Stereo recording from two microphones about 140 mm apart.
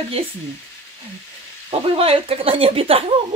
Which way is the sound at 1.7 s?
45° right (ahead or behind).